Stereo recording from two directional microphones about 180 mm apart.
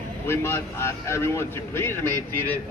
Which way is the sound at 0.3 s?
15° left (ahead or behind).